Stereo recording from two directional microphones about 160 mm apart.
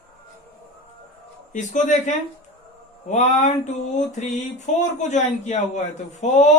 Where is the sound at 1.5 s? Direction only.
50° left (ahead or behind).